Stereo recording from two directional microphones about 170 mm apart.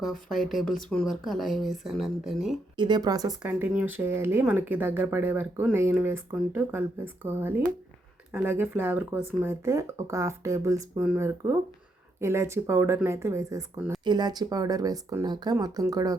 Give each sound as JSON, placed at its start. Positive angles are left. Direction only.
{"t": 0.0, "sound": "speech", "side_deg": 0}
{"t": 2.7, "sound": "speech", "side_deg": -25}
{"t": 3.4, "sound": "speech", "side_deg": -10}